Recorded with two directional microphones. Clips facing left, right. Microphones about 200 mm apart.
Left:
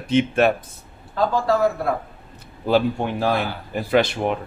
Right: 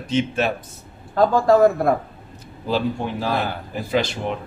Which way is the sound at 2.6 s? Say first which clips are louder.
Left 3 dB; 60° left (ahead or behind).